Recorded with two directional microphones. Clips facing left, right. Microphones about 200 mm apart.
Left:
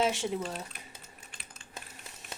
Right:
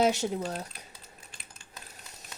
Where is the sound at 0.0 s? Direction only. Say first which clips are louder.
Right 3 dB; 40° right (ahead or behind).